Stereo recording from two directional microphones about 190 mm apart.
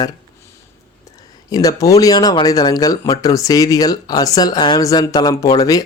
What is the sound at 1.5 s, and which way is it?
Speech, 20° left (ahead or behind).